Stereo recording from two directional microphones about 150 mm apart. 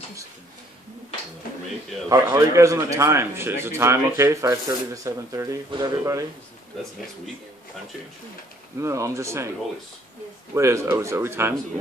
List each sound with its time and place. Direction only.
2.0 s speech: 20° right (ahead or behind)
8.7 s speech: 20° right (ahead or behind)
10.5 s speech: 20° right (ahead or behind)